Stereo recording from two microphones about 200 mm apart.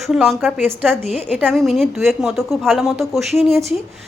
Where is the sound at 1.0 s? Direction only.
35° left (ahead or behind).